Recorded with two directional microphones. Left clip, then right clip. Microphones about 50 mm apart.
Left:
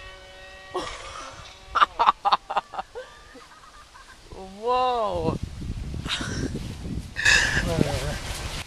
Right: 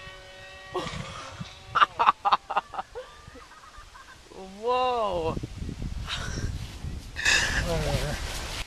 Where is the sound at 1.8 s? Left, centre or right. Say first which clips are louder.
Left 2 dB; left.